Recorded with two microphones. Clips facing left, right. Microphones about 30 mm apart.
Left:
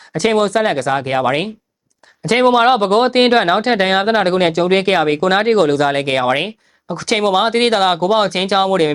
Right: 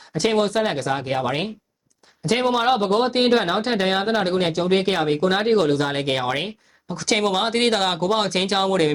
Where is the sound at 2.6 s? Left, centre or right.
Left.